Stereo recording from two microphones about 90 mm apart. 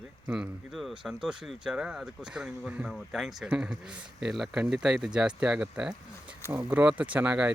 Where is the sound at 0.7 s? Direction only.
Centre (ahead or behind).